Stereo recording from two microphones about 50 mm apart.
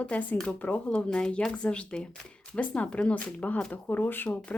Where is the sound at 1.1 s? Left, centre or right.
Centre; by 4.4 s left.